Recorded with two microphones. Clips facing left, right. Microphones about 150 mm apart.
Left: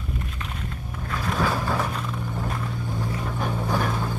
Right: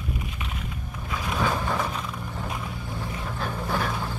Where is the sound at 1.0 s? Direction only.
5° right (ahead or behind).